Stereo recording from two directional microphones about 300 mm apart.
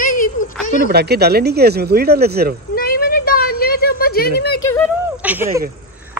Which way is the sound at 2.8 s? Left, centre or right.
Left.